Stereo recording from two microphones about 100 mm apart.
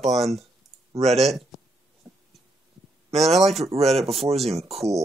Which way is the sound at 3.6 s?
90° right.